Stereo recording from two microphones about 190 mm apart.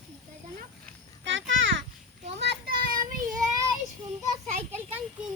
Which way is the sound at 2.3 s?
60° right (ahead or behind).